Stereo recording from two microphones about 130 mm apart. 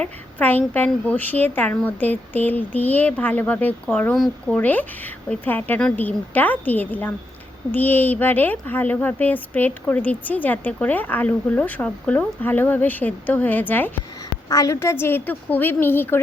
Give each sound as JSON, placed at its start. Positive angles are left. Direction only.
{"t": 0.0, "sound": "speech", "side_deg": 15}